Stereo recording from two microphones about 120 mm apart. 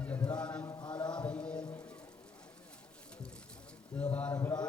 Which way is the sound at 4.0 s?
10° left (ahead or behind).